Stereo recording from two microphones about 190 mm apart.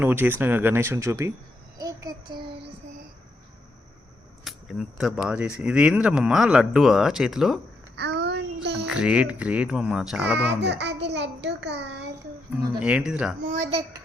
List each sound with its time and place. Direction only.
0.0 s speech: 10° right (ahead or behind)
1.8 s child singing: 15° right (ahead or behind)
4.4 s speech: centre (ahead or behind)
7.9 s child singing: 60° right (ahead or behind)
8.9 s speech: 5° right (ahead or behind)
10.6 s a child's voice: 65° right (ahead or behind)
12.8 s speech: 5° right (ahead or behind)
13.5 s a child's voice: 35° right (ahead or behind)